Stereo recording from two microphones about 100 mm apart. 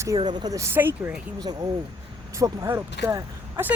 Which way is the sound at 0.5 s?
25° right (ahead or behind).